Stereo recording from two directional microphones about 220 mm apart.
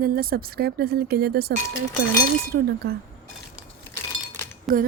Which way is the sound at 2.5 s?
45° right (ahead or behind).